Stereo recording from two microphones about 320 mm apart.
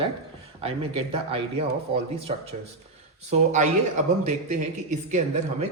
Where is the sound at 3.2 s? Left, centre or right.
Right.